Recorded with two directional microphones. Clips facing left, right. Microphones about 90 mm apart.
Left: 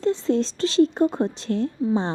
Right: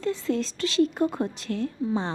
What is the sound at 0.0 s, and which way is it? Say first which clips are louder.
A woman's voice: left 5 dB; 30° left (ahead or behind).